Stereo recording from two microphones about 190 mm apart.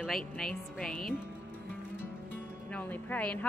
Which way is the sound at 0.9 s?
50° left (ahead or behind).